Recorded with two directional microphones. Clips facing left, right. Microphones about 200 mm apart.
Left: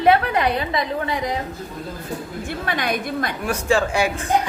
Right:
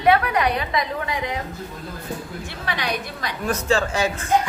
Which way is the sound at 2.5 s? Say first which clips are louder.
Left 4 dB; 50° left (ahead or behind).